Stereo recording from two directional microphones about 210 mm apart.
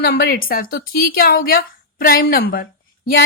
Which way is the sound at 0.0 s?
45° left (ahead or behind).